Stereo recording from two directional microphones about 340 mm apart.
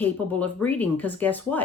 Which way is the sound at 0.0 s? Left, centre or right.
Centre.